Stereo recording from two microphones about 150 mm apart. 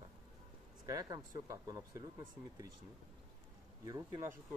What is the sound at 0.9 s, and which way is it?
Speech, 25° right (ahead or behind).